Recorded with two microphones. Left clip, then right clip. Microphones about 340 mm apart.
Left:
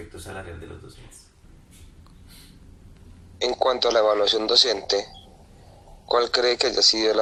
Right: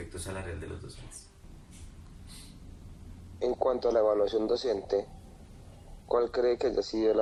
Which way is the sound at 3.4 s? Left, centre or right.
Left.